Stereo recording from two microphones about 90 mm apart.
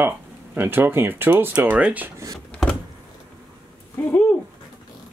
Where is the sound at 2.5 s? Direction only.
10° left (ahead or behind).